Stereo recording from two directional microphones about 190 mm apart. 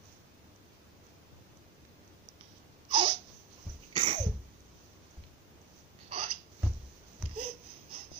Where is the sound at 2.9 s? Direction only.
25° right (ahead or behind).